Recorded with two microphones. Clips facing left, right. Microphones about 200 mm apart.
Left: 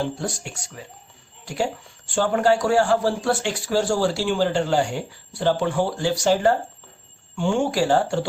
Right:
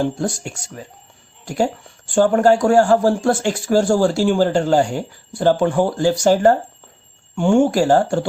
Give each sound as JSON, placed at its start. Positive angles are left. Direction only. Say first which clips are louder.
{"t": 0.8, "sound": "speech", "louder": "right 5 dB", "side_deg": -45}
{"t": 2.0, "sound": "speech", "louder": "right 6 dB", "side_deg": -50}